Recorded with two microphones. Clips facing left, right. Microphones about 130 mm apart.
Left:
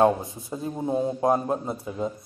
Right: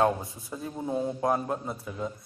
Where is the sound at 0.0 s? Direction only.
25° left (ahead or behind).